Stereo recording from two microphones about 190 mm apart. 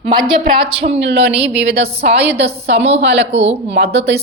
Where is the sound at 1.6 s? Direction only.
60° right (ahead or behind).